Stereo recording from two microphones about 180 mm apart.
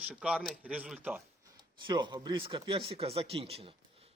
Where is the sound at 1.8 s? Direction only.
25° right (ahead or behind).